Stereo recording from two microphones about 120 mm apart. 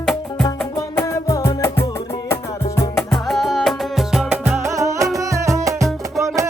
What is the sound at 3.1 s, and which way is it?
Music, centre (ahead or behind).